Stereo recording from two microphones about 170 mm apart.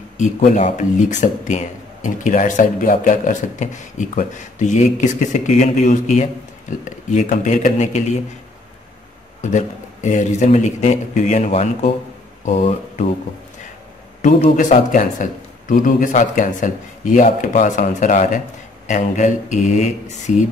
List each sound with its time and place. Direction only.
0.2 s speech: 40° left (ahead or behind)
9.4 s speech: 45° left (ahead or behind)
14.2 s speech: 45° left (ahead or behind)